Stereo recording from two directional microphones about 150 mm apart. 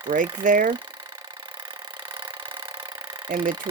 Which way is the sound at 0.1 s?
65° right (ahead or behind).